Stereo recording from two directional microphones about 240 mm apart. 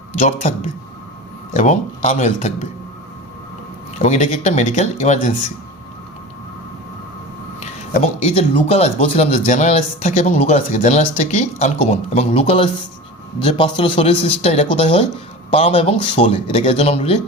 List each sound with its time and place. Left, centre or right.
0.2 s speech: left
3.9 s speech: left
7.6 s speech: left